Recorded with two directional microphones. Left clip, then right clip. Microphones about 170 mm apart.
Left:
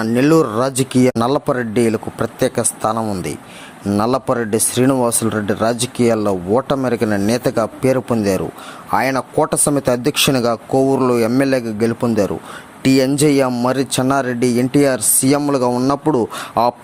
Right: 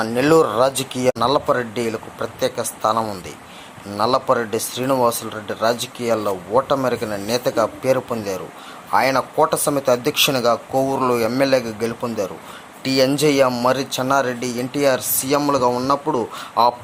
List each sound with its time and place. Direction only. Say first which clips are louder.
0.0 s speech: left 1 dB; 45° left (ahead or behind)